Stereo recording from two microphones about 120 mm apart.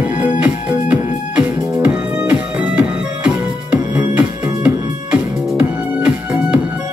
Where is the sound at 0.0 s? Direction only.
10° right (ahead or behind).